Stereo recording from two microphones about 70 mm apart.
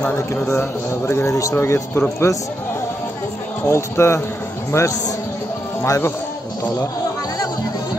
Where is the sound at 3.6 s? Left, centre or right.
Left.